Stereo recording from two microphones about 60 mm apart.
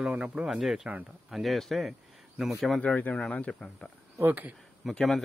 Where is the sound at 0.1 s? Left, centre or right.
Right.